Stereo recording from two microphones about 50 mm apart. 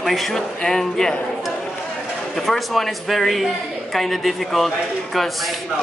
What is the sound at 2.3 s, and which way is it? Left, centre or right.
Speech, centre.